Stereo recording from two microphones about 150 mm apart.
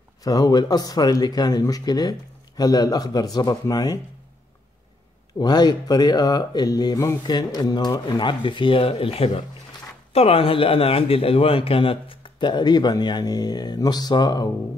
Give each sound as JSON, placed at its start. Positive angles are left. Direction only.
{"t": 0.2, "sound": "speech", "side_deg": 25}
{"t": 5.4, "sound": "a man's voice", "side_deg": 30}